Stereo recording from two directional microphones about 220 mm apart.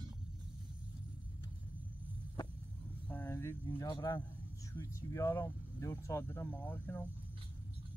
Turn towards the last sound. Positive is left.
turn(degrees=10)  # may be behind; listen again after turning